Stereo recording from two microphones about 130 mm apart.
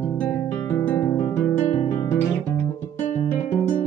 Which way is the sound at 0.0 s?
10° left (ahead or behind).